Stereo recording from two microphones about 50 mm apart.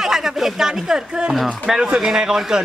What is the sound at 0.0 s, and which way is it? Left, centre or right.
Speech, centre.